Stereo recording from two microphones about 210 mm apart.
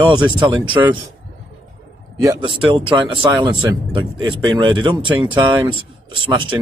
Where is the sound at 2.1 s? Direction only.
20° right (ahead or behind).